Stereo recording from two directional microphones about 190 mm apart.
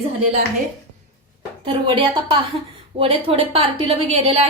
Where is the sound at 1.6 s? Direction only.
25° right (ahead or behind).